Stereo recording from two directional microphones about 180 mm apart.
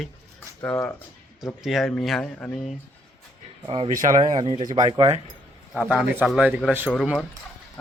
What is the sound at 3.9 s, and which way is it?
Speech, 40° right (ahead or behind).